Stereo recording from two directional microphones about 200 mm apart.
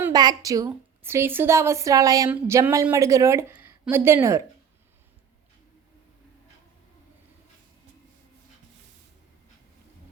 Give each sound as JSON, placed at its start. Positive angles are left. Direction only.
{"t": 0.0, "sound": "a woman's voice", "side_deg": -20}